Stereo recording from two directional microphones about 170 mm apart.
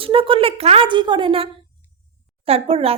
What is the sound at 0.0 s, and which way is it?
A woman's voice, 30° right (ahead or behind).